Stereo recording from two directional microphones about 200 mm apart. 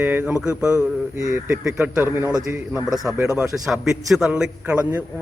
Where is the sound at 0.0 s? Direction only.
10° right (ahead or behind).